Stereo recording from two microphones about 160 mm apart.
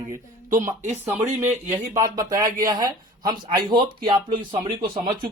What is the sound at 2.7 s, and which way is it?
Speech, 25° right (ahead or behind).